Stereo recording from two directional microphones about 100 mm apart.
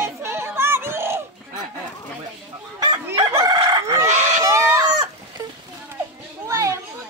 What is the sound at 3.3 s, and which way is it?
Chicken, 45° right (ahead or behind).